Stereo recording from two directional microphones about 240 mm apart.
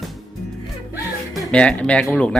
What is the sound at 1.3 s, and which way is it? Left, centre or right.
Speech, centre.